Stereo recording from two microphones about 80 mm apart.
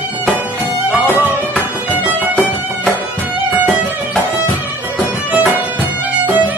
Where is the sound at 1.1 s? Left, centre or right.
Left.